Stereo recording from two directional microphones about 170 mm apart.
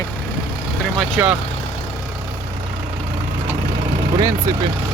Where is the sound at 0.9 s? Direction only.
10° right (ahead or behind).